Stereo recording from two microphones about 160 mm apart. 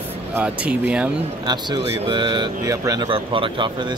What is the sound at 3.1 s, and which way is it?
Speech, 35° right (ahead or behind).